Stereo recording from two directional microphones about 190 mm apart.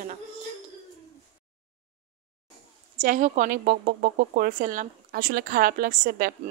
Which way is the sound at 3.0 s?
45° right (ahead or behind).